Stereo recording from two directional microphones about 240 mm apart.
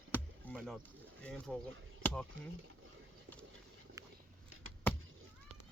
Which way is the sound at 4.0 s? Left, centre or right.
Centre.